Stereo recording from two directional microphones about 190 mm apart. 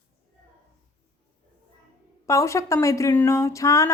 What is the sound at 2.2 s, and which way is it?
A woman's voice, 15° left (ahead or behind).